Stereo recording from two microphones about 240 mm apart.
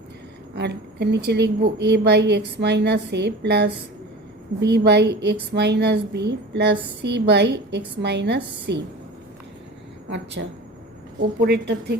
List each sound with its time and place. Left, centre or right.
0.5 s a woman's voice: right
10.4 s a woman's voice: right